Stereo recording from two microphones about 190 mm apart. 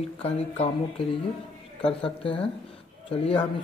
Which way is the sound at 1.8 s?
30° left (ahead or behind).